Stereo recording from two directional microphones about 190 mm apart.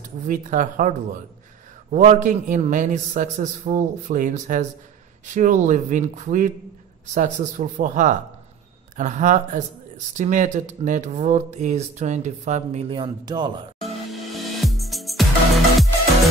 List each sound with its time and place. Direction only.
0.3 s speech: 40° right (ahead or behind); by 13.5 s 25° right (ahead or behind)
13.7 s music: centre (ahead or behind)